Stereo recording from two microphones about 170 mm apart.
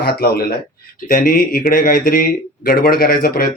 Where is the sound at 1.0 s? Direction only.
55° left (ahead or behind).